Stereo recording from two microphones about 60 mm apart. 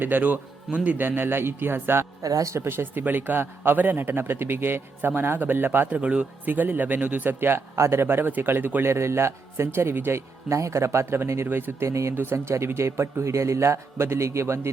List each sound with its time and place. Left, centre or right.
0.0 s a man's voice: right
2.2 s speech: right
2.6 s a man's voice: right
5.9 s a man's voice: right
7.8 s a man's voice: right
8.0 s a man's voice: right
11.9 s speech: right
12.1 s a man's voice: right